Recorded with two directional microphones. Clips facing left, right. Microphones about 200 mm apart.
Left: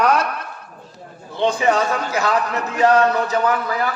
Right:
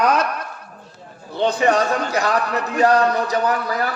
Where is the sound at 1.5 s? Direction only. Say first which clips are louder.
Right 3 dB; 35° right (ahead or behind).